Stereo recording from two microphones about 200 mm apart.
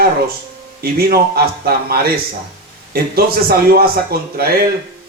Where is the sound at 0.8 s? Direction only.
50° right (ahead or behind).